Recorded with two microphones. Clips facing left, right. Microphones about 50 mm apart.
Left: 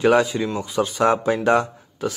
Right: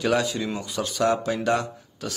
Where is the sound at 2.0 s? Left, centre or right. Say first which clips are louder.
Left 8 dB; centre.